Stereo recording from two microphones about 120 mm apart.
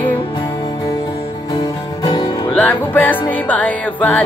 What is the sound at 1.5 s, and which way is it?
Music, 35° left (ahead or behind).